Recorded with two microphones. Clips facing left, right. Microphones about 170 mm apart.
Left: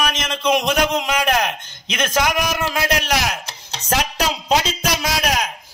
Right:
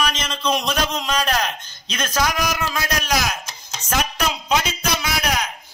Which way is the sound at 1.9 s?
25° left (ahead or behind).